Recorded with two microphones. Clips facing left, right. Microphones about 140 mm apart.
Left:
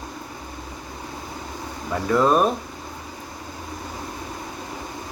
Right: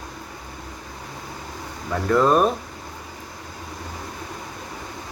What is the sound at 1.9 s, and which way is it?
Speech, 5° left (ahead or behind).